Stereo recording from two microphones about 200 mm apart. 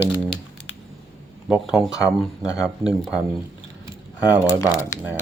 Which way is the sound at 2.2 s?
Centre (ahead or behind).